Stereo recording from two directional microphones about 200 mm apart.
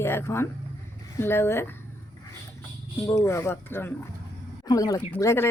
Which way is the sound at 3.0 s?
15° left (ahead or behind).